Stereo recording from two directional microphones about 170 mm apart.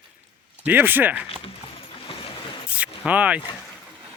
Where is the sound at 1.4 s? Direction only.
35° left (ahead or behind).